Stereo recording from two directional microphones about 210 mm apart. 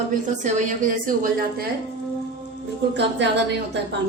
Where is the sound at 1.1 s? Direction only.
45° right (ahead or behind).